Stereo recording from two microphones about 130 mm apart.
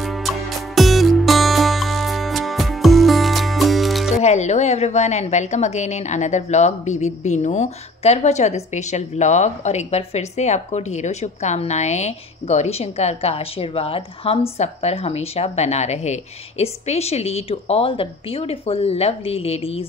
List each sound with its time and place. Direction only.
0.0 s music: centre (ahead or behind)
4.2 s a woman's voice: 60° left (ahead or behind)